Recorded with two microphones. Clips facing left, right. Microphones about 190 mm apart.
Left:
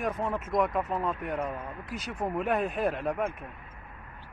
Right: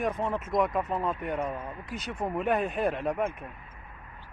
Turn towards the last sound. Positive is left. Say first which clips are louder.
# right 1 dB
turn(degrees=0)  # may be behind; listen again after turning